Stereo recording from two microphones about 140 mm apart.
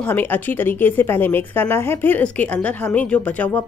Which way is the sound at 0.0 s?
15° left (ahead or behind).